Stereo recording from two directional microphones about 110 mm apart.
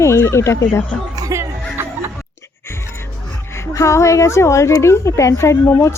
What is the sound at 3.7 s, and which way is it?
A woman's voice, 30° left (ahead or behind).